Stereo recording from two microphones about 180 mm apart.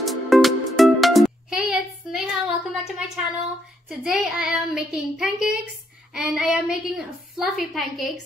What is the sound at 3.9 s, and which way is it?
Child singing, 5° right (ahead or behind).